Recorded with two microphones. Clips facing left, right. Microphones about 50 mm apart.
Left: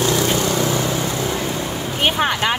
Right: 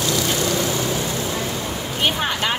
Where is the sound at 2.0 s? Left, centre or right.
Left.